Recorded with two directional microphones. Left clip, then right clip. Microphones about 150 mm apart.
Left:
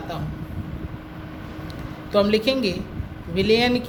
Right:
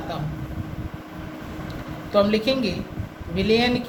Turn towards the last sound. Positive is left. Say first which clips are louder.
# left 1 dB
turn(degrees=60)  # may be behind; listen again after turning